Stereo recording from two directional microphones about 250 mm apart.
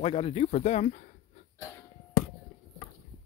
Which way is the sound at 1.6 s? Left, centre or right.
Centre.